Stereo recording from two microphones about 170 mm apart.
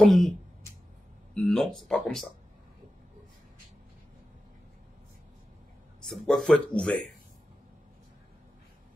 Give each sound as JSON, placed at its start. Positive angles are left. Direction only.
{"t": 0.0, "sound": "speech", "side_deg": 0}
{"t": 1.3, "sound": "speech", "side_deg": 5}
{"t": 6.0, "sound": "speech", "side_deg": 5}